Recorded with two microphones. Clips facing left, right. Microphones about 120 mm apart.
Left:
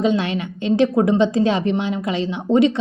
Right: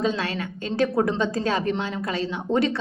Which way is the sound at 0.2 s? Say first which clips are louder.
Left 5 dB; 20° left (ahead or behind).